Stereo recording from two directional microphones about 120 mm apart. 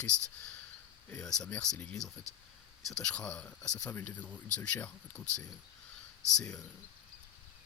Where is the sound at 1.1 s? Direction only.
5° left (ahead or behind).